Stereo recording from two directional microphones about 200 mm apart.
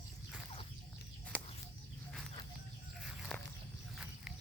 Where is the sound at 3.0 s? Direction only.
Centre (ahead or behind).